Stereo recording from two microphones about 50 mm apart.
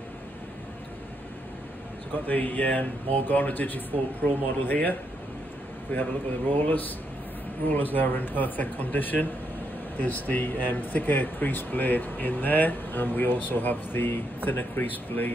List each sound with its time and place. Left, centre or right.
2.2 s speech: left